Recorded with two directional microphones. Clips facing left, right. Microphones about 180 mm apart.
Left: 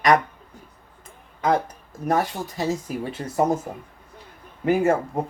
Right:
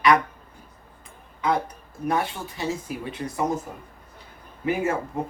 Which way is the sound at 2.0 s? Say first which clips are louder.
Left 3 dB; 40° left (ahead or behind).